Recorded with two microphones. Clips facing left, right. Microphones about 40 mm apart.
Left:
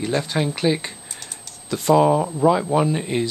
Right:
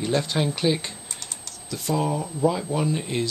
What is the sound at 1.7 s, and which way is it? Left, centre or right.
Speech, left.